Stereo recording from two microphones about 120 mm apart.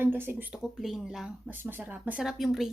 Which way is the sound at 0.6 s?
5° right (ahead or behind).